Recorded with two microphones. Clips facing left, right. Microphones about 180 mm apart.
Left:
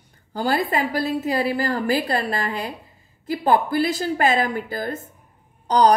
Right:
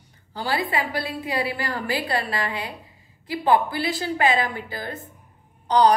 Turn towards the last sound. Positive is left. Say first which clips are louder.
# left 1 dB
turn(degrees=45)  # may be behind; listen again after turning